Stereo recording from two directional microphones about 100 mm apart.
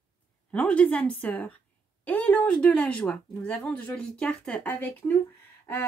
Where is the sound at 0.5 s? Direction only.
15° left (ahead or behind).